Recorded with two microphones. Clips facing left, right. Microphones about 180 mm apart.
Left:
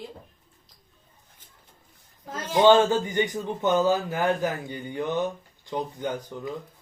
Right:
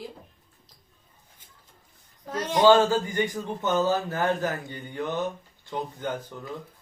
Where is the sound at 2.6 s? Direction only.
20° left (ahead or behind).